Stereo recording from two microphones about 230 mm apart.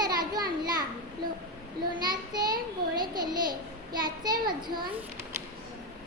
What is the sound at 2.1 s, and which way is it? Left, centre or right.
A child's voice, centre.